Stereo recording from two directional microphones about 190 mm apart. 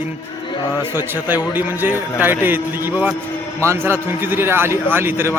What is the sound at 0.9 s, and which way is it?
A man's voice, 10° right (ahead or behind).